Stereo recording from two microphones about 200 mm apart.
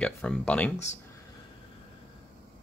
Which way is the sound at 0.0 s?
5° left (ahead or behind).